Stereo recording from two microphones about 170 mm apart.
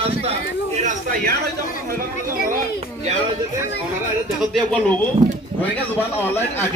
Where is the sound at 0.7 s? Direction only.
45° right (ahead or behind).